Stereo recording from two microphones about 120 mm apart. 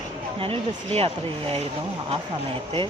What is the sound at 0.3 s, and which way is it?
Speech, 50° right (ahead or behind).